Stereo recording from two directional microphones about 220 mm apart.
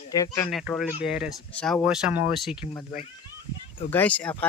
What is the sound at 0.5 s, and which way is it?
Speech, centre (ahead or behind).